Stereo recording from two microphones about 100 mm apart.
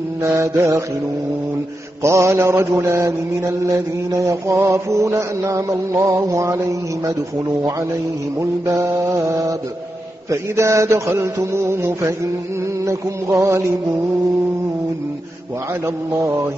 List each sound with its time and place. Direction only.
0.2 s mantra: 30° right (ahead or behind)
2.0 s mantra: 30° right (ahead or behind)
8.4 s mantra: 30° right (ahead or behind)